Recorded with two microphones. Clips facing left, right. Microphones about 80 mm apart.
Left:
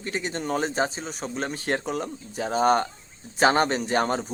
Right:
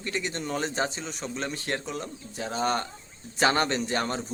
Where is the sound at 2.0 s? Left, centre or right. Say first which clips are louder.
Left 5 dB; left.